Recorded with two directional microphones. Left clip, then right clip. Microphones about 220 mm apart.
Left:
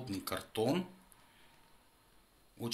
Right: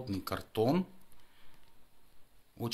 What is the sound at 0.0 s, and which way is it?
Speech, 40° right (ahead or behind).